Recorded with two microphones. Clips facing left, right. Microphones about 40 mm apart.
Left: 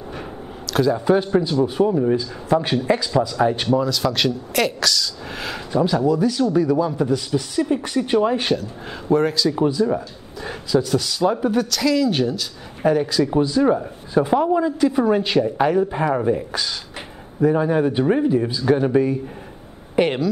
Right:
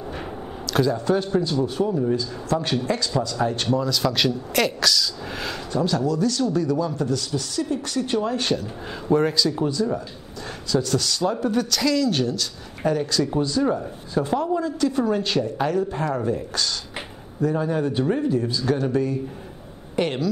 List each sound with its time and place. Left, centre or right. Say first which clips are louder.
0.1 s a sound: even; centre
0.9 s a man's voice: left 4 dB; centre
5.7 s a man's voice: left 5 dB; centre
8.5 s speech: left 1 dB; centre
9.5 s a man's voice: left 4 dB; centre